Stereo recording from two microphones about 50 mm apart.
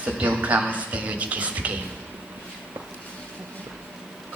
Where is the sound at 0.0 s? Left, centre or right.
Right.